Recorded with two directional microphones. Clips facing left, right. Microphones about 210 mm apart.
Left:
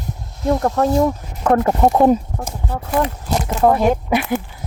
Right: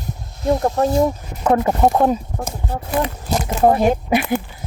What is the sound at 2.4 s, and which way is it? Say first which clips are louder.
Speech: right 1 dB; 30° right (ahead or behind).